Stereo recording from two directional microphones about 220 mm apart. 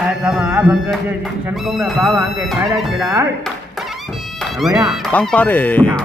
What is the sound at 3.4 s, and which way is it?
Music, centre (ahead or behind).